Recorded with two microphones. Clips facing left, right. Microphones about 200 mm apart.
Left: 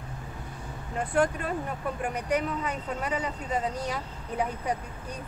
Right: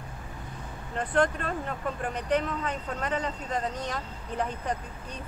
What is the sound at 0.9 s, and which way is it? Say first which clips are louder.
Speech: even; 10° left (ahead or behind).